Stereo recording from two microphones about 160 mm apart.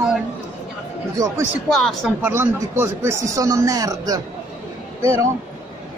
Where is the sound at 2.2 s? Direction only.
15° right (ahead or behind).